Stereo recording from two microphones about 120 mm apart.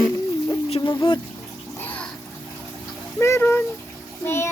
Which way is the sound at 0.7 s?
45° left (ahead or behind).